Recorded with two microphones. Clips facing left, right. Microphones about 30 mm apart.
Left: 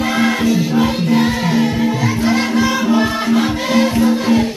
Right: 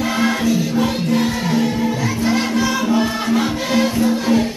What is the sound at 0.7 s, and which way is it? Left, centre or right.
Music, left.